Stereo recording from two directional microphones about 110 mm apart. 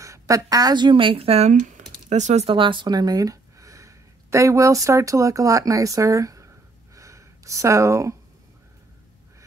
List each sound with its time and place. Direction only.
0.0 s speech: 30° right (ahead or behind); by 2.5 s 85° right
2.5 s speech: 50° right (ahead or behind); by 6.5 s 30° right (ahead or behind)
7.0 s a sound: 30° right (ahead or behind)